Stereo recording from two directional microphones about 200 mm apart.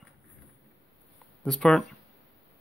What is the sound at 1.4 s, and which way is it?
Speech, centre (ahead or behind).